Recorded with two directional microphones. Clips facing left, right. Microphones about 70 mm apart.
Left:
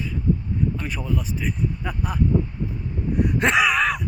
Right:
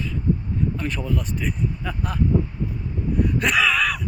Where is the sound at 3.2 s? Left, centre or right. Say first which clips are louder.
Left 2 dB; left.